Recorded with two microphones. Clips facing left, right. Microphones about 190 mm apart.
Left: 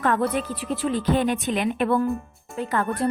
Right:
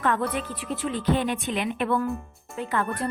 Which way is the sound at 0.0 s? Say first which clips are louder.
Left 3 dB; 40° left (ahead or behind).